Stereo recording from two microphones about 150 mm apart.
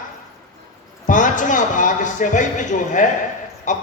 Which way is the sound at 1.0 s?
60° left (ahead or behind).